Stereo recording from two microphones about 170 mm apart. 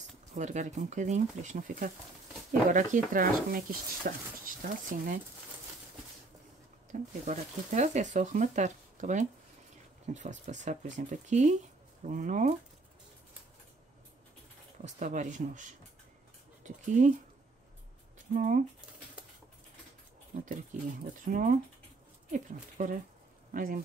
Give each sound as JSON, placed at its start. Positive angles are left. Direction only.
{"t": 0.3, "sound": "speech", "side_deg": -45}
{"t": 6.9, "sound": "speech", "side_deg": -40}
{"t": 14.9, "sound": "speech", "side_deg": -45}
{"t": 18.3, "sound": "speech", "side_deg": -50}
{"t": 20.7, "sound": "speech", "side_deg": -45}